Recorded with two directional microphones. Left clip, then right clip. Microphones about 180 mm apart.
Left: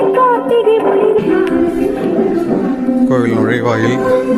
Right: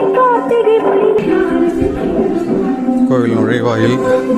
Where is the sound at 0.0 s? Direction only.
Centre (ahead or behind).